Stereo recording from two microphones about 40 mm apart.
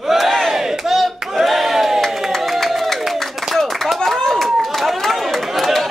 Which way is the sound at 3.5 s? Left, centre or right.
Centre.